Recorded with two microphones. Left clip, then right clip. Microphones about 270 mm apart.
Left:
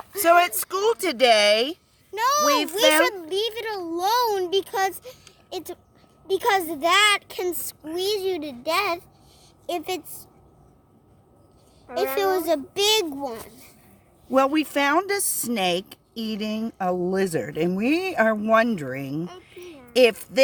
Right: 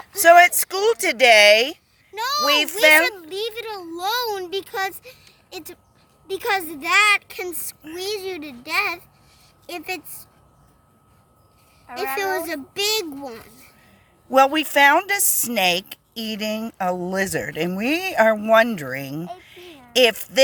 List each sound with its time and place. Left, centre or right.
0.2 s speech: centre
2.1 s a woman's voice: left
11.9 s speech: centre
14.3 s speech: centre